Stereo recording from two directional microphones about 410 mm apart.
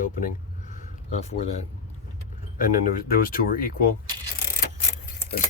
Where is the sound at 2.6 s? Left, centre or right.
Centre.